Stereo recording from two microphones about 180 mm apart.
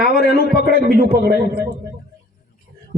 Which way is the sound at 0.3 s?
55° right (ahead or behind).